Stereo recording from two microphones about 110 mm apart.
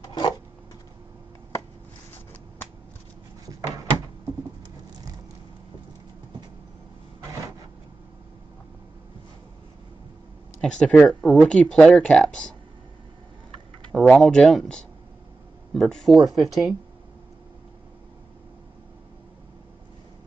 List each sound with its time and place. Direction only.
0.0 s a sound: 40° left (ahead or behind)
10.6 s speech: 10° left (ahead or behind)
13.9 s speech: 5° left (ahead or behind)